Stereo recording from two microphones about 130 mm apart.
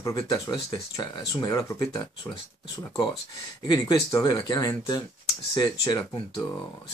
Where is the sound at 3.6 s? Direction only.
30° left (ahead or behind).